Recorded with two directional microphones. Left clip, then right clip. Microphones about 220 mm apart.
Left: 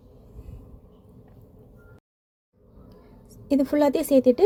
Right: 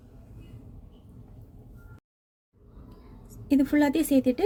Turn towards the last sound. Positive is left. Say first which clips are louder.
# left 6 dB
turn(degrees=15)  # may be behind; listen again after turning